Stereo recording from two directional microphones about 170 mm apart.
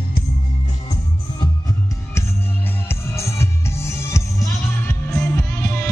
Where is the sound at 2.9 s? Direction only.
15° left (ahead or behind).